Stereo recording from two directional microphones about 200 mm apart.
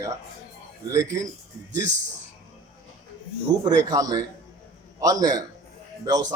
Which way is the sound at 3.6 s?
20° right (ahead or behind).